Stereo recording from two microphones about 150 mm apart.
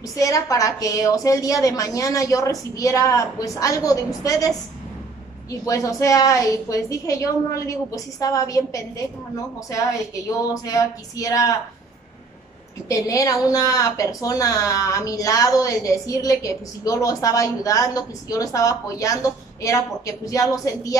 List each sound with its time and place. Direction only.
0.1 s a woman's voice: 20° left (ahead or behind)
5.7 s a woman's voice: 20° left (ahead or behind)
10.5 s a woman's voice: 25° left (ahead or behind)
12.8 s a woman's voice: 20° left (ahead or behind)